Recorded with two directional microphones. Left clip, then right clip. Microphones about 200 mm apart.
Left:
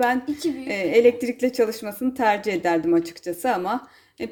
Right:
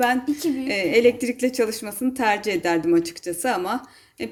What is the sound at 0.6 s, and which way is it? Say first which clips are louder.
A woman's voice: left 1 dB; 10° left (ahead or behind).